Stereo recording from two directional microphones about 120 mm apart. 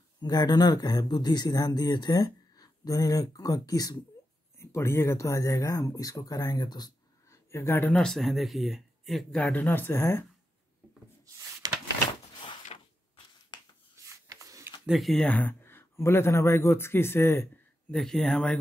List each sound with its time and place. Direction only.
0.2 s speech: 35° left (ahead or behind)
4.6 s speech: 20° left (ahead or behind)
7.2 s speech: 20° left (ahead or behind); by 9.4 s centre (ahead or behind)
9.4 s speech: 15° left (ahead or behind)
11.6 s door: 30° right (ahead or behind)
12.7 s a sound: 60° left (ahead or behind)
14.0 s a sound: 25° right (ahead or behind)
14.9 s speech: centre (ahead or behind)
15.3 s speech: 15° left (ahead or behind)
17.9 s speech: 5° left (ahead or behind)